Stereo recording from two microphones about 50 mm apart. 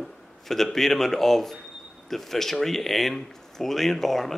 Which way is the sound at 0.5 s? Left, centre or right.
Centre.